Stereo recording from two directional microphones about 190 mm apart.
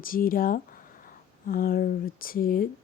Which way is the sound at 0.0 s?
50° left (ahead or behind).